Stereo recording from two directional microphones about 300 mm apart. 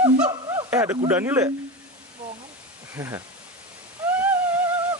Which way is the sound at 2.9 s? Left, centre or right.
Centre.